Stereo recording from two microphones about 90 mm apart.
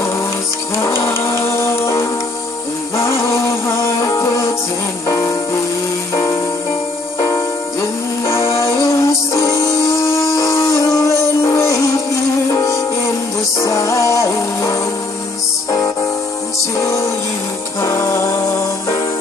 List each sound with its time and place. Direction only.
0.7 s music: 30° left (ahead or behind)
16.5 s music: 35° left (ahead or behind)